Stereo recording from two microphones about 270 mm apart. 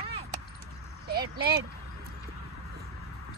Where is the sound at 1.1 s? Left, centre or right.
Right.